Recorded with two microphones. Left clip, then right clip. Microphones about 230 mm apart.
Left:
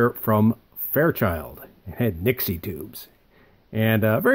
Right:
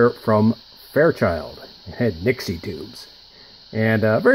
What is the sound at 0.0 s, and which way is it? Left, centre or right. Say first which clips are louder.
Speech: right 4 dB; left.